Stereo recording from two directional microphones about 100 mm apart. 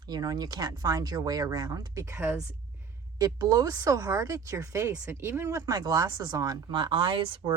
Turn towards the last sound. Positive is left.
turn(degrees=-55)  # may be behind; listen again after turning